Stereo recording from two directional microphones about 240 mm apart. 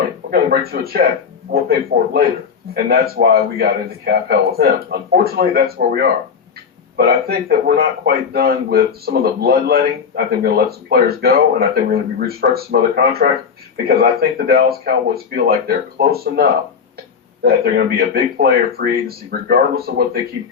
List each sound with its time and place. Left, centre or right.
0.3 s a man's voice: right